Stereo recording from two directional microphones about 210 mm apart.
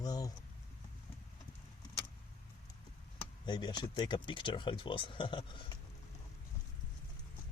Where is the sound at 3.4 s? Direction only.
20° left (ahead or behind).